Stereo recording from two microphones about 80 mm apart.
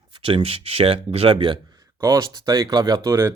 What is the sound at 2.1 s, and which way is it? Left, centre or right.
Speech, right.